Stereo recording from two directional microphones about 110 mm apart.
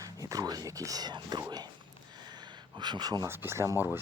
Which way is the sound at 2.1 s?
40° right (ahead or behind).